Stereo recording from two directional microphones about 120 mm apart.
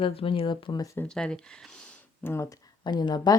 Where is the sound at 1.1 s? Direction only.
5° left (ahead or behind).